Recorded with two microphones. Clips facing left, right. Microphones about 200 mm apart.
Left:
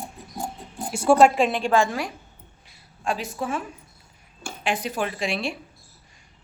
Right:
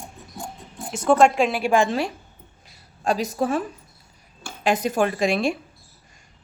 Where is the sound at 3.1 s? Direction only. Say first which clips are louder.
Right 5 dB; 40° right (ahead or behind).